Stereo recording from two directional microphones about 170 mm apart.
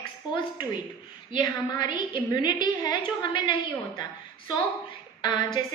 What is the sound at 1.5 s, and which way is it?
A woman's voice, 25° left (ahead or behind).